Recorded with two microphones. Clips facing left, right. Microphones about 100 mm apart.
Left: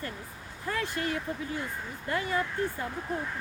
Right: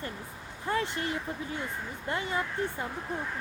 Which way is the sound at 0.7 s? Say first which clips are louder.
Right 1 dB; 25° right (ahead or behind).